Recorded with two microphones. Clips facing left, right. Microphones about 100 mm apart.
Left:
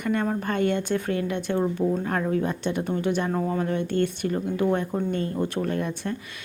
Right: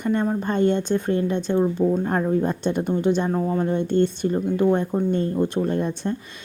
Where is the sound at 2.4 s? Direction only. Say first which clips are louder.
Right 4 dB; 35° right (ahead or behind).